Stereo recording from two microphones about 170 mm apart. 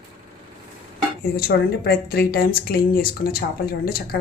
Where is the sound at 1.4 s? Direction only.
65° left (ahead or behind).